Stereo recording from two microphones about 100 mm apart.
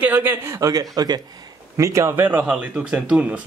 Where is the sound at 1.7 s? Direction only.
30° right (ahead or behind); by 3.4 s 10° right (ahead or behind).